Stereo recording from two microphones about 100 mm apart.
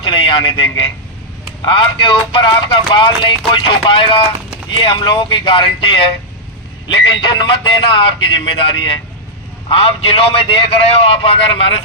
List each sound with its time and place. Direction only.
0.0 s a sound: 55° left (ahead or behind)
1.6 s speech: 55° left (ahead or behind)
9.6 s speech: 65° left (ahead or behind)